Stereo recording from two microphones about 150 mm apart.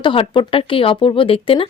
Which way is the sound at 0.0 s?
35° left (ahead or behind).